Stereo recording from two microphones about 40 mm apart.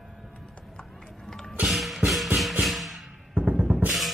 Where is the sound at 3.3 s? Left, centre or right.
Right.